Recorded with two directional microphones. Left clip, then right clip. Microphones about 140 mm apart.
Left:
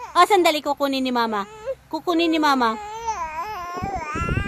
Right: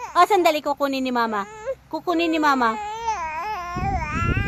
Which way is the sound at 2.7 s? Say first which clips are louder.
Right 2 dB; 10° left (ahead or behind).